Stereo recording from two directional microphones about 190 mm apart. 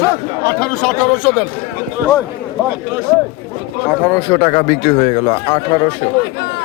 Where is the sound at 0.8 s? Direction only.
Centre (ahead or behind).